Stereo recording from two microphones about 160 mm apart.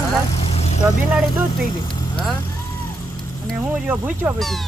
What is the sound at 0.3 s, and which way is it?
Vehicle, 40° left (ahead or behind).